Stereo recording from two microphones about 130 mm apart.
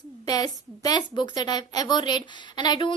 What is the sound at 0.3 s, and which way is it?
A woman's voice, 30° left (ahead or behind).